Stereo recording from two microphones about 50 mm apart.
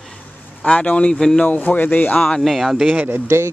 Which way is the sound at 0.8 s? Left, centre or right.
Left.